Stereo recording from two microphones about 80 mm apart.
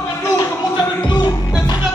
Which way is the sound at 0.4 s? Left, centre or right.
Left.